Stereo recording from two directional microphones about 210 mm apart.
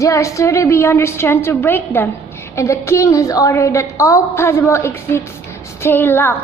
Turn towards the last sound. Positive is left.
turn(degrees=10)  # may be behind; listen again after turning